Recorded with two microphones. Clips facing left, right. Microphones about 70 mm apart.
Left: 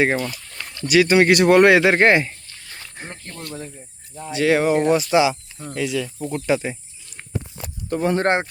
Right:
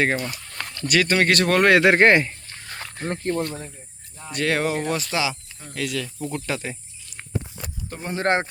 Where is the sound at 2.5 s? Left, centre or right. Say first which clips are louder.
Right 4 dB; right.